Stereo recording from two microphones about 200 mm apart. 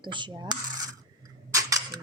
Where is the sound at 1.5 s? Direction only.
15° right (ahead or behind).